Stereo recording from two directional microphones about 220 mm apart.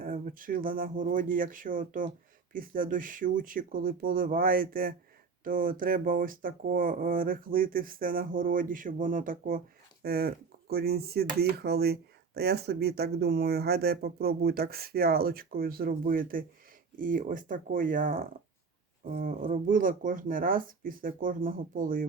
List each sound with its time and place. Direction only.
0.0 s speech: 40° right (ahead or behind)